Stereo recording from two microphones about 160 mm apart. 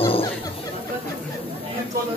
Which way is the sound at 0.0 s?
35° left (ahead or behind).